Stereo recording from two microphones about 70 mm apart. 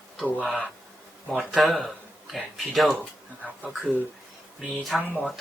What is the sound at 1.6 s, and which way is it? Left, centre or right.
Speech, centre.